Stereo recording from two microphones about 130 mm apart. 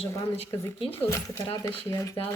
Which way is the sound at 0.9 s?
20° left (ahead or behind).